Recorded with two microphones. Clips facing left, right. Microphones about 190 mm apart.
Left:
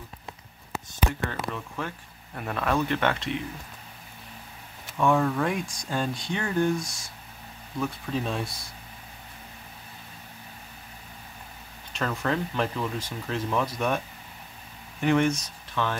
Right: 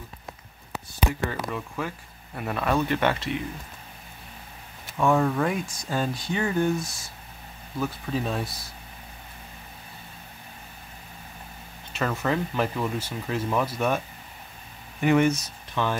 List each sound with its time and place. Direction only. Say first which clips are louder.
1.5 s speech: right 2 dB; 5° right (ahead or behind)
4.9 s speech: right 1 dB; 5° right (ahead or behind)
11.9 s speech: right 2 dB; 5° right (ahead or behind)